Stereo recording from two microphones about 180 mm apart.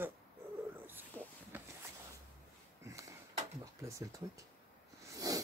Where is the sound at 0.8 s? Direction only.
10° right (ahead or behind).